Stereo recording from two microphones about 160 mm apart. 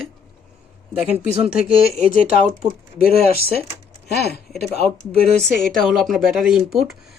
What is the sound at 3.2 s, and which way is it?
Speech, 70° left (ahead or behind).